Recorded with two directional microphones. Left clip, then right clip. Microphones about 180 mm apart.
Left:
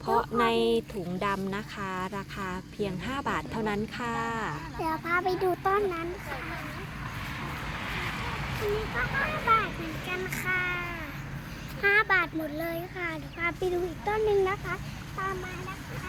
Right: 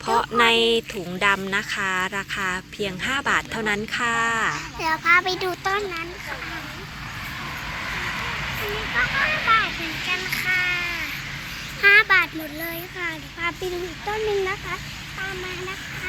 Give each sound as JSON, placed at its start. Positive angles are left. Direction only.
{"t": 0.0, "sound": "speech", "side_deg": -10}
{"t": 4.8, "sound": "a child's voice", "side_deg": 30}
{"t": 5.6, "sound": "speech", "side_deg": 55}
{"t": 8.6, "sound": "vehicle", "side_deg": 65}
{"t": 11.8, "sound": "a child's voice", "side_deg": 25}